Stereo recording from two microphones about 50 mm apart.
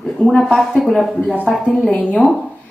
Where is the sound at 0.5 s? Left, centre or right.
Centre.